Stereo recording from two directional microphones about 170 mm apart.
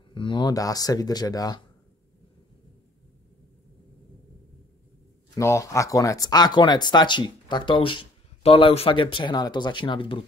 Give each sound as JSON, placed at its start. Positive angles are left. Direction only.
{"t": 0.1, "sound": "speech", "side_deg": 30}
{"t": 5.3, "sound": "speech", "side_deg": 15}